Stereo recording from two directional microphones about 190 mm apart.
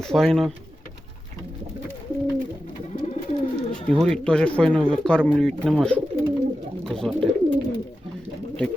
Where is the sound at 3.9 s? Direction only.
5° left (ahead or behind).